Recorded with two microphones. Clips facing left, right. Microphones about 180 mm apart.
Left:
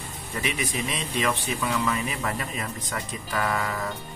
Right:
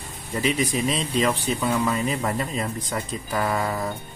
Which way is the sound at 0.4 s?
30° right (ahead or behind).